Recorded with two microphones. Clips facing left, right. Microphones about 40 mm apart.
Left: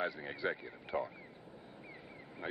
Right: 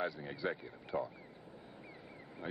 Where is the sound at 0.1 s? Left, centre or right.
Left.